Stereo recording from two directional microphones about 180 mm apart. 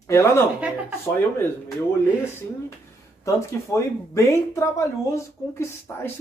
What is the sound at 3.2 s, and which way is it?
Speech, 15° left (ahead or behind).